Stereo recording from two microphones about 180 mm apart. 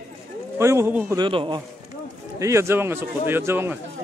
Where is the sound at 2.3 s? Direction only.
15° right (ahead or behind).